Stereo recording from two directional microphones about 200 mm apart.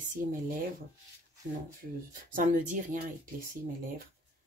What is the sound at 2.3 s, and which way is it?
Speech, 40° right (ahead or behind).